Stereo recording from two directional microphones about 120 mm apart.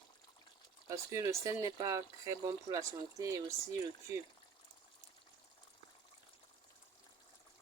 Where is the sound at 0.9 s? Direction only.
25° right (ahead or behind).